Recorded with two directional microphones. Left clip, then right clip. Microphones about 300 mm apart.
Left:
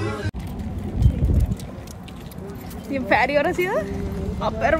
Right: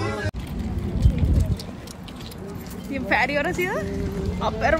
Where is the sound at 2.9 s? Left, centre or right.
Centre.